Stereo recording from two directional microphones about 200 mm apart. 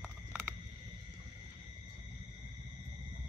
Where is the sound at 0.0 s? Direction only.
10° right (ahead or behind).